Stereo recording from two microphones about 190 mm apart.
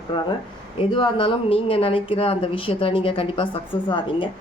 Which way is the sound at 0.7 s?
25° left (ahead or behind).